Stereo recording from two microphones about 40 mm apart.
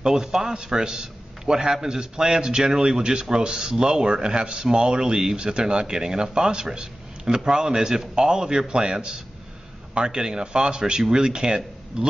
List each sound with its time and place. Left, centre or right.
0.0 s a man's voice: centre